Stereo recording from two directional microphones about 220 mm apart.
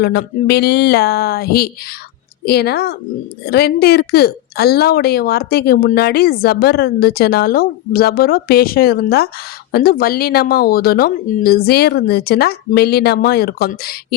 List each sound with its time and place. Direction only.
0.0 s a woman's voice: 45° left (ahead or behind)